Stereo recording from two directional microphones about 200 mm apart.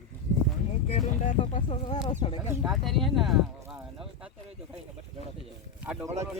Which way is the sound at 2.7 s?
Centre (ahead or behind).